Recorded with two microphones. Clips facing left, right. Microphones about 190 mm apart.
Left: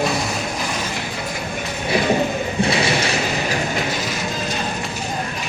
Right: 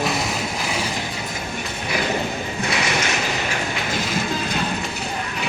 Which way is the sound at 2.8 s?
35° left (ahead or behind).